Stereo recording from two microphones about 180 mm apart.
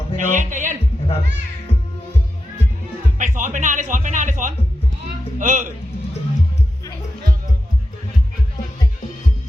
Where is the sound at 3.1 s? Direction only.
45° right (ahead or behind).